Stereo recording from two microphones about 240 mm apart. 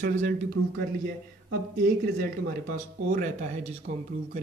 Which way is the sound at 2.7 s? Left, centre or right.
Right.